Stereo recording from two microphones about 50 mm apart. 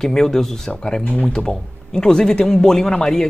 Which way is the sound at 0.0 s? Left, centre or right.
Centre.